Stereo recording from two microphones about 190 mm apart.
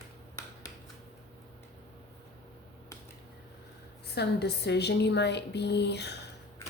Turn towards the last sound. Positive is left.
turn(degrees=60)  # may be behind; listen again after turning